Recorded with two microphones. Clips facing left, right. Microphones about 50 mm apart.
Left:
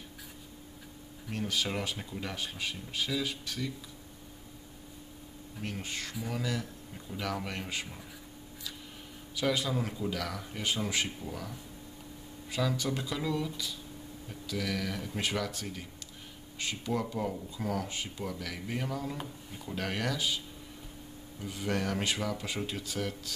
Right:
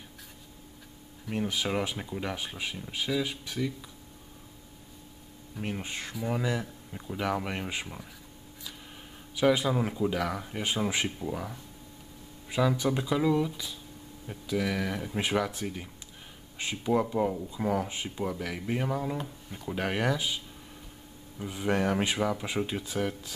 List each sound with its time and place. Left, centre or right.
1.3 s speech: centre
5.6 s speech: right
9.3 s speech: centre
19.2 s speech: centre
19.7 s speech: centre